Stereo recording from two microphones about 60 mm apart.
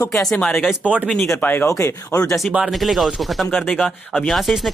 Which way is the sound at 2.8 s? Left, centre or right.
Centre.